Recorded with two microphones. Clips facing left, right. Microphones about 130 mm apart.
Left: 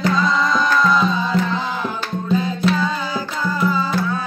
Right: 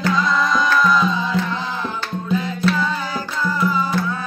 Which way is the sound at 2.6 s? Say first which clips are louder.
Even; 15° left (ahead or behind).